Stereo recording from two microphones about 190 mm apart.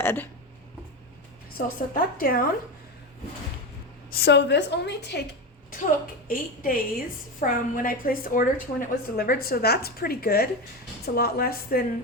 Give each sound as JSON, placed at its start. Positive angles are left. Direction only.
{"t": 0.0, "sound": "speech", "side_deg": 10}
{"t": 1.5, "sound": "a woman's voice", "side_deg": 50}
{"t": 4.1, "sound": "a woman's voice", "side_deg": 60}
{"t": 5.8, "sound": "a woman's voice", "side_deg": 50}